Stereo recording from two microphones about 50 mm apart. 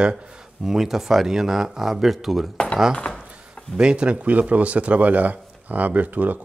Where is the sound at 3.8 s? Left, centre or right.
Centre; by 6.4 s right.